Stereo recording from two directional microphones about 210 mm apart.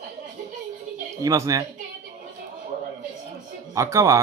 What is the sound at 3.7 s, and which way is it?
Speech, 15° right (ahead or behind).